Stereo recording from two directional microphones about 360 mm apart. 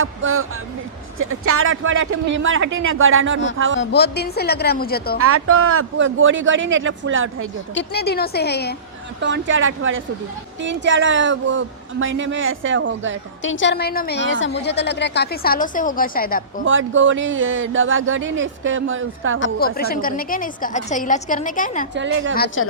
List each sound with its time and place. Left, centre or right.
0.0 s speech: right
3.8 s a woman's voice: left
5.2 s speech: right
7.7 s a woman's voice: left
9.2 s speech: right
13.4 s a woman's voice: left
16.6 s speech: right
19.4 s a woman's voice: left
21.9 s speech: right
22.4 s a woman's voice: left